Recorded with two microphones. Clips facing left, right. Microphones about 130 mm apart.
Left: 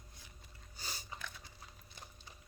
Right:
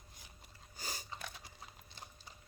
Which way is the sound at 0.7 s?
45° right (ahead or behind).